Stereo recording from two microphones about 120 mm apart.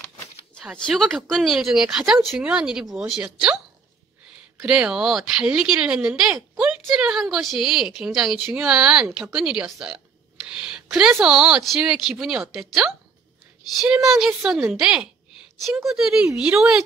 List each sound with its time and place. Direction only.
1.2 s speech: centre (ahead or behind)
4.6 s speech: 5° right (ahead or behind)
6.3 s speech: 20° right (ahead or behind)
6.9 s speech: 5° right (ahead or behind)